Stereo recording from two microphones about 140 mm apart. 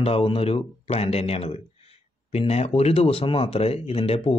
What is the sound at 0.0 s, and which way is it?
Speech, 40° left (ahead or behind).